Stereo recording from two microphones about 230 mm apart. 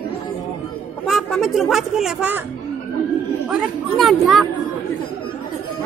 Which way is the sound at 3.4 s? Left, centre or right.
Centre.